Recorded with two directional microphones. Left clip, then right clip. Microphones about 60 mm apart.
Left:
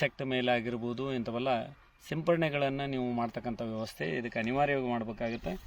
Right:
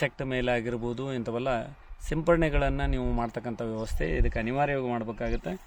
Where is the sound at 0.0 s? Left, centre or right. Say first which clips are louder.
Right 2 dB; right.